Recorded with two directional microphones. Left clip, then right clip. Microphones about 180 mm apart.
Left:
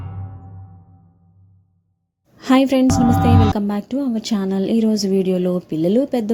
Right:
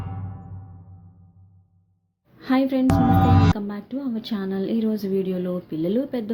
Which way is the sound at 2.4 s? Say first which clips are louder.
Left 7 dB; 50° left (ahead or behind).